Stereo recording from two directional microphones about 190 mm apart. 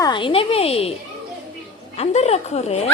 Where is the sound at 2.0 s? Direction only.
35° left (ahead or behind).